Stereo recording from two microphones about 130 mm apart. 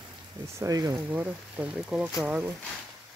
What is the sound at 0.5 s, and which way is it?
Speech, 25° right (ahead or behind).